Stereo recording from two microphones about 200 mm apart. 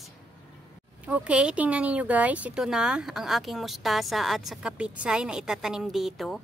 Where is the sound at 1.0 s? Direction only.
5° right (ahead or behind).